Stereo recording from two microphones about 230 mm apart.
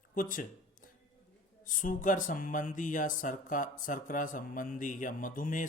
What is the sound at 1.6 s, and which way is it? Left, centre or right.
Speech, left.